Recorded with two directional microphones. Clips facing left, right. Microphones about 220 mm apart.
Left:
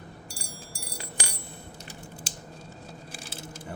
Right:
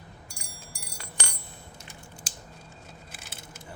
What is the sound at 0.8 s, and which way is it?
Glass, 30° left (ahead or behind).